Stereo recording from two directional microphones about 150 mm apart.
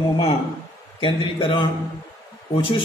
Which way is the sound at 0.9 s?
35° left (ahead or behind).